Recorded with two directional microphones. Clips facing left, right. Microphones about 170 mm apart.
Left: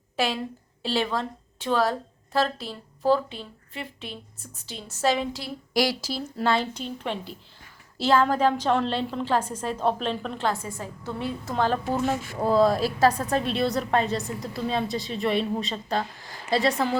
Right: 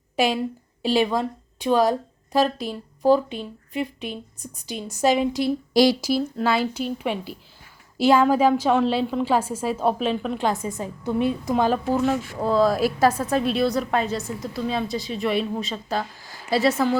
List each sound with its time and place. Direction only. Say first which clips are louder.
0.2 s speech: right 5 dB; 15° right (ahead or behind)
11.9 s a woman's voice: right 3 dB; 5° left (ahead or behind)